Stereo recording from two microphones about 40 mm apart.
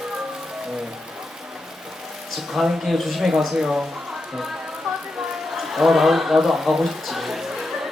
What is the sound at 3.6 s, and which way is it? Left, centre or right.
Speech, right.